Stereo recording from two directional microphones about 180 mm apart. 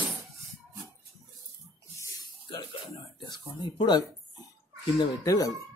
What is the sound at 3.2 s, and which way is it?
Speech, 25° left (ahead or behind).